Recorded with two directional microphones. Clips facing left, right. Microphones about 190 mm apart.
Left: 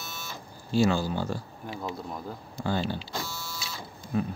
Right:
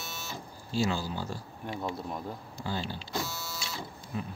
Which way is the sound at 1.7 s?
Centre (ahead or behind).